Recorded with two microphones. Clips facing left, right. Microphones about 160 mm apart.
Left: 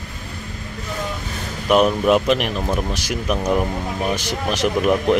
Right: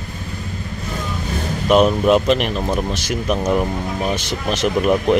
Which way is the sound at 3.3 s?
5° right (ahead or behind).